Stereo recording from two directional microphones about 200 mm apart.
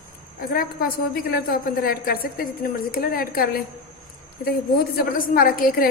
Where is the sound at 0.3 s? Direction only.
45° left (ahead or behind).